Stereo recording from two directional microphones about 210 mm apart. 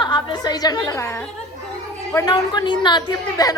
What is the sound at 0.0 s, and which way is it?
A woman's voice, 20° left (ahead or behind).